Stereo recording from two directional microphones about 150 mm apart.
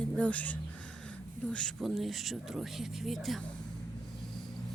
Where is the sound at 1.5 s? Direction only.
Centre (ahead or behind).